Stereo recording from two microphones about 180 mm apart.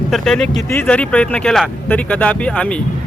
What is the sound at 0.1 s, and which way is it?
Speech, 5° left (ahead or behind).